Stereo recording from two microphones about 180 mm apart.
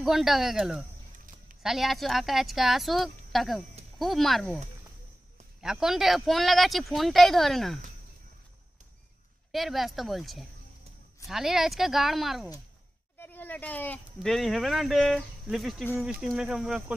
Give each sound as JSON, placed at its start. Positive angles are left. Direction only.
{"t": 0.0, "sound": "speech", "side_deg": 0}
{"t": 1.1, "sound": "a sound", "side_deg": -45}
{"t": 1.6, "sound": "speech", "side_deg": 0}
{"t": 5.6, "sound": "speech", "side_deg": -5}
{"t": 9.5, "sound": "speech", "side_deg": 0}
{"t": 13.2, "sound": "speech", "side_deg": 10}